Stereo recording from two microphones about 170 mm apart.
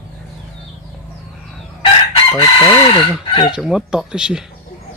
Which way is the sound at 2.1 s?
30° left (ahead or behind).